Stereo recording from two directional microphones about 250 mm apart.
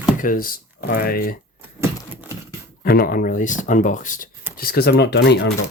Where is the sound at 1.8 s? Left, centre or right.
Centre.